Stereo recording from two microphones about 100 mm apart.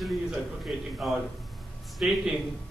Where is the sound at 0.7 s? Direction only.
5° right (ahead or behind).